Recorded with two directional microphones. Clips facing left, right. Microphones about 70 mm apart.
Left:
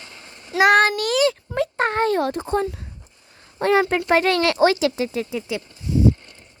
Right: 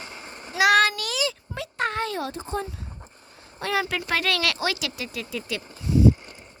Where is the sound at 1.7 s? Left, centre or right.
Left.